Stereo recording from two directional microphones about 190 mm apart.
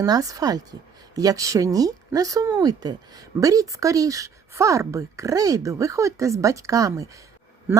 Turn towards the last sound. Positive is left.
turn(degrees=-15)  # may be behind; listen again after turning